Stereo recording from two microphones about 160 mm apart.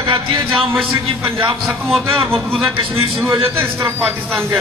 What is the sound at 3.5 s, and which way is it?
Speech, 15° right (ahead or behind).